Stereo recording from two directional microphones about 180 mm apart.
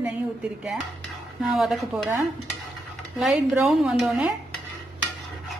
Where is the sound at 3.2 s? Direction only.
Centre (ahead or behind).